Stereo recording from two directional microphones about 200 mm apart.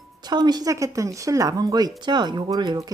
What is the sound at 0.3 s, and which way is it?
A woman's voice, 20° right (ahead or behind).